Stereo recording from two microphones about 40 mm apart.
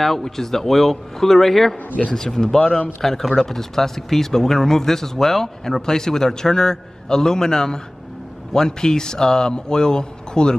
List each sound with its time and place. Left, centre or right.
0.0 s speech: centre